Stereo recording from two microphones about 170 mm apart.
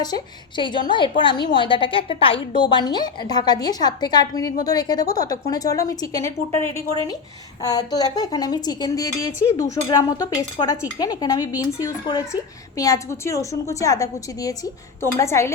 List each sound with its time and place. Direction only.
0.0 s a woman's voice: 25° left (ahead or behind)
7.6 s a woman's voice: 20° left (ahead or behind)